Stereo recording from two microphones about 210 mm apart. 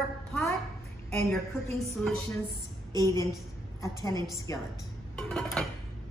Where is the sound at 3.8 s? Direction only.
15° left (ahead or behind).